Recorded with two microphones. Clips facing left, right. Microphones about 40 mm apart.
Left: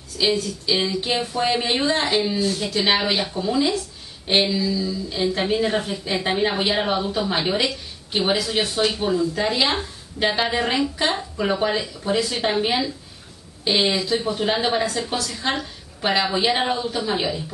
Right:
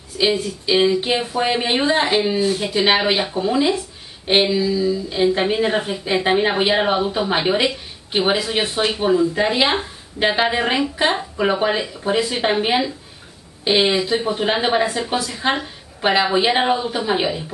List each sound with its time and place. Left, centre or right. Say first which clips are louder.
0.2 s a woman's voice: right 3 dB; right